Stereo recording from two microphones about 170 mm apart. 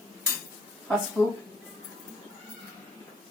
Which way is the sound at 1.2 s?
15° left (ahead or behind).